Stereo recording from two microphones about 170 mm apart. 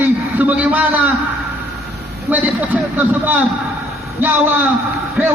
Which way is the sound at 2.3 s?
10° right (ahead or behind).